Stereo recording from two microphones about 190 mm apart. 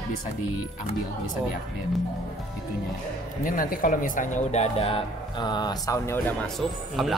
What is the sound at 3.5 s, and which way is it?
Speech, 45° left (ahead or behind).